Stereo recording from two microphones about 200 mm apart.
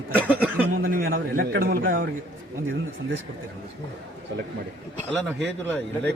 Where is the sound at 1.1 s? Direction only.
50° right (ahead or behind).